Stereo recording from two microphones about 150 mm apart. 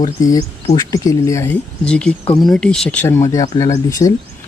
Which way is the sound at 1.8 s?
5° left (ahead or behind).